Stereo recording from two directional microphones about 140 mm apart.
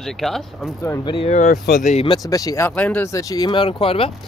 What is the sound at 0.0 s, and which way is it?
Speech, centre (ahead or behind).